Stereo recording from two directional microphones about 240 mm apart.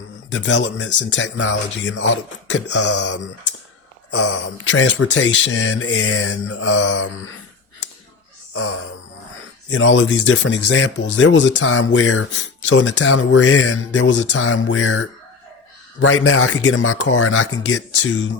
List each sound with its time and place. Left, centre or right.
0.3 s speech: left
9.6 s speech: left